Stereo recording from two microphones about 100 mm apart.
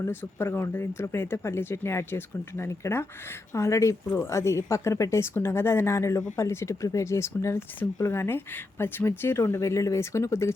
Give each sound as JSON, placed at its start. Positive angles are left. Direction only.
{"t": 0.0, "sound": "speech", "side_deg": 25}